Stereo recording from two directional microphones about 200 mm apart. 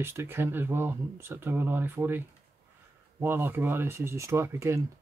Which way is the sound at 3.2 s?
10° right (ahead or behind).